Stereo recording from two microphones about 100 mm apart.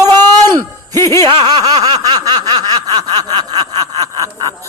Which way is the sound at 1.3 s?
60° right (ahead or behind).